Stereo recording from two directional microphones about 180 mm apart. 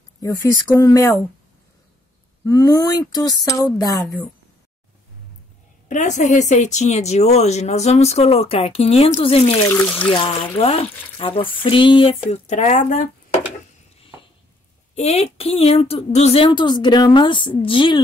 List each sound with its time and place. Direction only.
0.2 s speech: 20° left (ahead or behind)
2.4 s a woman's voice: 20° left (ahead or behind)
5.9 s speech: 45° left (ahead or behind)
15.0 s a woman's voice: 35° left (ahead or behind)